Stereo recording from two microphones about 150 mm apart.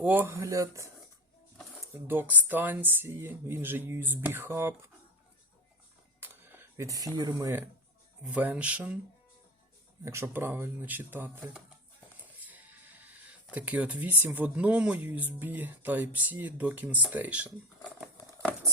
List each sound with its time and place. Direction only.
0.0 s speech: 10° right (ahead or behind)
1.9 s speech: 15° right (ahead or behind)
6.1 s dishes: 15° right (ahead or behind)
8.2 s speech: 10° right (ahead or behind)
10.0 s speech: 20° right (ahead or behind)
12.4 s speech: 10° right (ahead or behind)